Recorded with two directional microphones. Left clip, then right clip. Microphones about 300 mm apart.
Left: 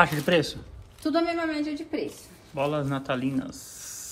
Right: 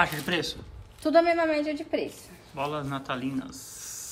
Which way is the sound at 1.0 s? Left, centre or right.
Right.